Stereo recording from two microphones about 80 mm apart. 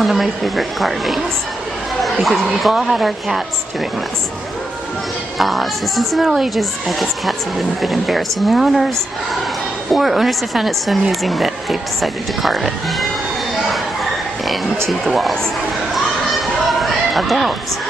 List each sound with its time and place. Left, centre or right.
0.0 s speech: centre
5.4 s speech: centre
9.9 s speech: centre
14.9 s speech: centre
16.8 s a sound: centre